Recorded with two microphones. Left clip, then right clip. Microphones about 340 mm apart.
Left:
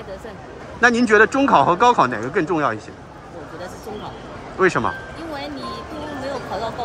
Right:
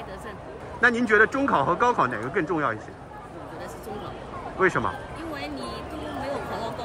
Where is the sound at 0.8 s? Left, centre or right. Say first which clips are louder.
Left 5 dB; centre.